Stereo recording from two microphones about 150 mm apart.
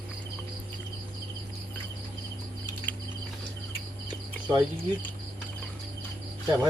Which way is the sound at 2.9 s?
10° left (ahead or behind).